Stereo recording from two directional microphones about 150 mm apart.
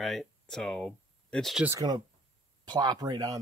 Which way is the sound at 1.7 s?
25° right (ahead or behind).